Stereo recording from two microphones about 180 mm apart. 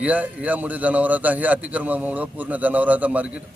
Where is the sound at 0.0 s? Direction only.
10° right (ahead or behind).